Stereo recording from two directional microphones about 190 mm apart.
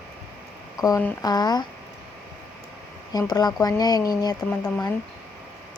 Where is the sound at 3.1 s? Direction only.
20° left (ahead or behind).